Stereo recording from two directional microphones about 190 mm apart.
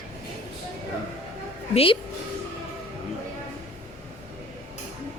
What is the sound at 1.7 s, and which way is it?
Speech, 30° left (ahead or behind).